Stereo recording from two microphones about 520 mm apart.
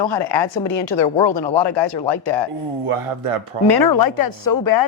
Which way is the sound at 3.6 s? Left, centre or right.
Left.